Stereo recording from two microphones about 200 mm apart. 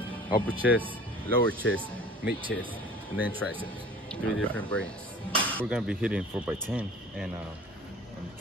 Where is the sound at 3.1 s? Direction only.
10° right (ahead or behind).